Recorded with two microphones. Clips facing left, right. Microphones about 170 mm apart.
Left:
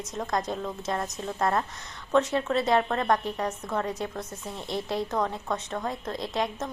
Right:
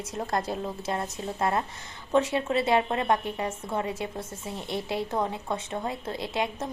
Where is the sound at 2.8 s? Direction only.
20° right (ahead or behind).